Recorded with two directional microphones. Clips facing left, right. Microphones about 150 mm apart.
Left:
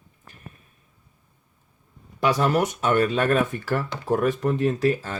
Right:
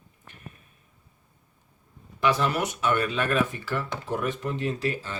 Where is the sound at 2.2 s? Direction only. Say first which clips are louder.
Left 4 dB; 45° left (ahead or behind).